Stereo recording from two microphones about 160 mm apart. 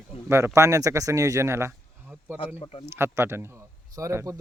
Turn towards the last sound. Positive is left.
turn(degrees=-20)  # may be behind; listen again after turning